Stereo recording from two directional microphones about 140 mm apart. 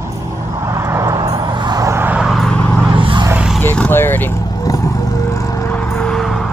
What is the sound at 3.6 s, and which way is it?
Vehicle, 10° left (ahead or behind).